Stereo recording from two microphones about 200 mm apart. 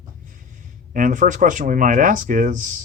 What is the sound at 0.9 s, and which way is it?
Speech, 40° right (ahead or behind).